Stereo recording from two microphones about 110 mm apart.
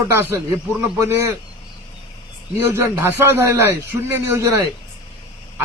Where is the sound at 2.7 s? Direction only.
20° right (ahead or behind).